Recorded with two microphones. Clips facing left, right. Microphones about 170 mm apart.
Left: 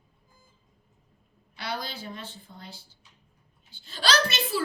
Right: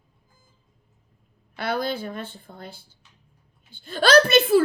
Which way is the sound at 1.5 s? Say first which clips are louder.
Right 9 dB; 55° right (ahead or behind).